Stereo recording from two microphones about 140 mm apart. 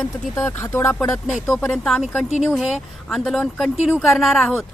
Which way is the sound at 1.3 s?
Centre (ahead or behind).